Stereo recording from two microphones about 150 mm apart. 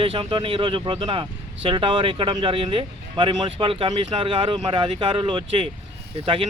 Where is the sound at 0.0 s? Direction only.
40° right (ahead or behind).